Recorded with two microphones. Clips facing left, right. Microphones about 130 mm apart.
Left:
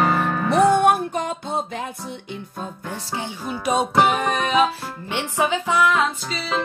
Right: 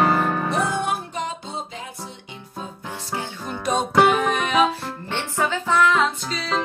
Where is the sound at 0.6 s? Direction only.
60° left (ahead or behind).